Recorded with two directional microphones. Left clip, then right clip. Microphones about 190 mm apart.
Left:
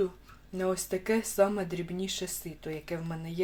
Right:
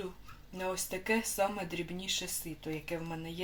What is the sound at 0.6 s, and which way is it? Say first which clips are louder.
Speech: left 5 dB; 35° left (ahead or behind).